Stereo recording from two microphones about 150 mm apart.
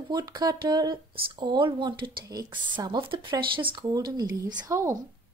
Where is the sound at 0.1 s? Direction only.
30° right (ahead or behind).